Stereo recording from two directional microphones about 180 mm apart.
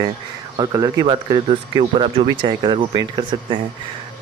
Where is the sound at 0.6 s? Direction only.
20° right (ahead or behind).